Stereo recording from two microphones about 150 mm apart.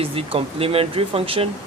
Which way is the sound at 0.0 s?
40° right (ahead or behind).